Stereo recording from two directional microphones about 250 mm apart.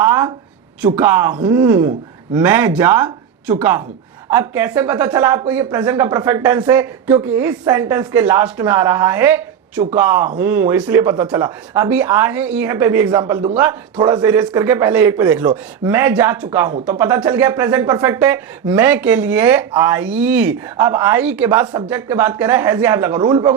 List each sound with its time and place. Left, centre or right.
0.0 s speech: centre